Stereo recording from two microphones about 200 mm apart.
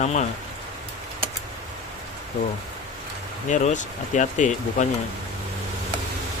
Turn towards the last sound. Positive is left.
turn(degrees=40)  # may be behind; listen again after turning